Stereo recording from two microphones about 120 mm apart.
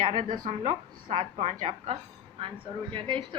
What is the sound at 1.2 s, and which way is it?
Speech, 65° right (ahead or behind).